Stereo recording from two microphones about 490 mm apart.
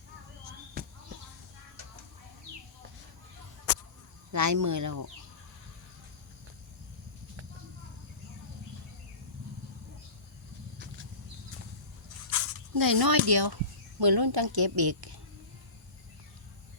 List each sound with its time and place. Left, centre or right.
0.8 s a sound: centre
4.3 s speech: right
12.7 s a woman's voice: right